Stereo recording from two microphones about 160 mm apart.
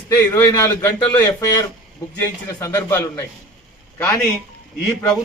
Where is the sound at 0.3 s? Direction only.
15° left (ahead or behind).